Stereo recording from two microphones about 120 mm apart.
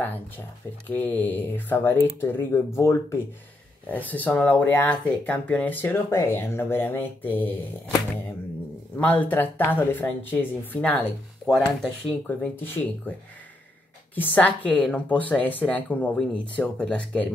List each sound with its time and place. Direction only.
0.8 s speech: 15° left (ahead or behind)
3.9 s speech: 15° left (ahead or behind)
8.9 s speech: 15° left (ahead or behind)
12.3 s speech: 15° left (ahead or behind)
14.1 s speech: 15° left (ahead or behind)